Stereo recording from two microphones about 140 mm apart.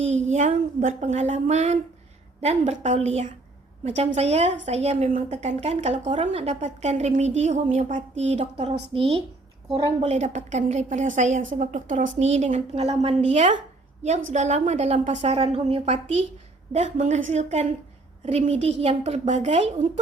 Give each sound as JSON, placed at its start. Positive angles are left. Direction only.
{"t": 0.3, "sound": "a woman's voice", "side_deg": -60}
{"t": 16.7, "sound": "a woman's voice", "side_deg": -55}